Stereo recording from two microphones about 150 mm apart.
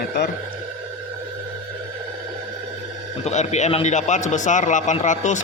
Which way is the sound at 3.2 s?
50° left (ahead or behind).